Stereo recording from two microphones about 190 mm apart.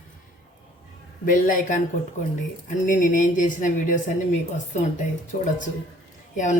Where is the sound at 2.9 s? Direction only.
45° left (ahead or behind).